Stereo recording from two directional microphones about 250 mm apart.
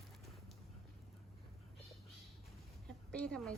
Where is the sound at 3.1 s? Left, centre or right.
Centre.